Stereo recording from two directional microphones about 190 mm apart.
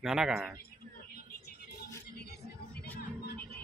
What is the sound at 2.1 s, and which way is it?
Music, 60° left (ahead or behind).